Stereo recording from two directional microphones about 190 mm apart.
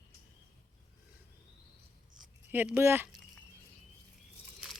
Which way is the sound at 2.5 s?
10° right (ahead or behind).